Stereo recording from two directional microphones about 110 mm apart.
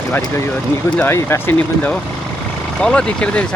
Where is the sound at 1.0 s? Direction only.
20° left (ahead or behind).